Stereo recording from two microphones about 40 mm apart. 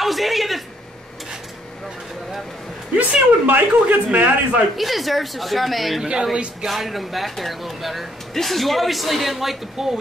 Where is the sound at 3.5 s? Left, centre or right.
Right.